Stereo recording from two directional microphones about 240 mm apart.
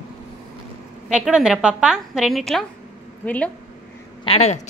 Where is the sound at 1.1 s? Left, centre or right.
Centre.